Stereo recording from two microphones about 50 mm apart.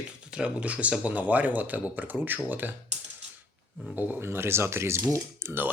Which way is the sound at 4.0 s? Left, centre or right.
Right.